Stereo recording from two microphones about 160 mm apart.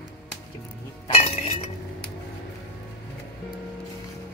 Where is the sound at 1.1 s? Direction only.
40° left (ahead or behind).